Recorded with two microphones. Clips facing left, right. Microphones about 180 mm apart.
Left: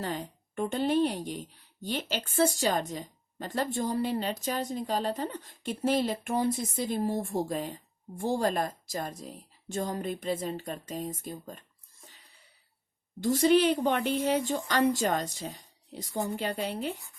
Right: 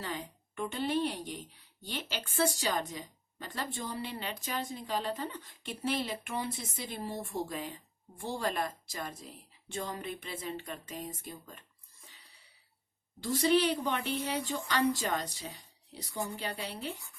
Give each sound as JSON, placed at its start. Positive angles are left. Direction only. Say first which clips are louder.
{"t": 0.0, "sound": "a woman's voice", "louder": "left 5 dB", "side_deg": 45}
{"t": 13.2, "sound": "a woman's voice", "louder": "left 5 dB", "side_deg": 45}
{"t": 16.1, "sound": "speech", "louder": "left 5 dB", "side_deg": 20}
{"t": 16.4, "sound": "a woman's voice", "louder": "left 7 dB", "side_deg": 45}